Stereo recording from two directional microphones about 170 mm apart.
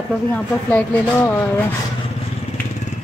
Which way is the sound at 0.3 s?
10° left (ahead or behind).